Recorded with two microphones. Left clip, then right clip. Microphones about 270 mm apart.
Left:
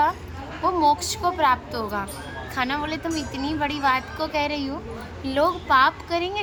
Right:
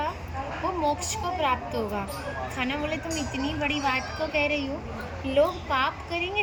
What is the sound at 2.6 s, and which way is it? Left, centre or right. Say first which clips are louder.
Speech: left 6 dB; centre.